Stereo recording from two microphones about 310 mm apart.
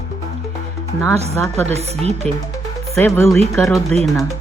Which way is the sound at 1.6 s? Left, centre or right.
Centre.